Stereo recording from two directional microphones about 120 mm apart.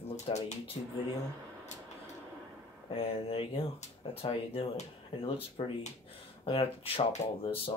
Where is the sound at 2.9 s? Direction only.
50° left (ahead or behind).